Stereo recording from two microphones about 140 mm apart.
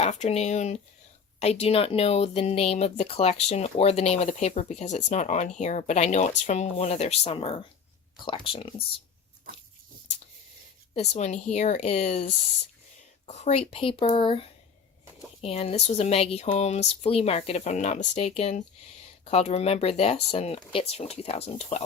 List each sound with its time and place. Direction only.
0.0 s speech: 50° left (ahead or behind)
10.9 s speech: 50° left (ahead or behind)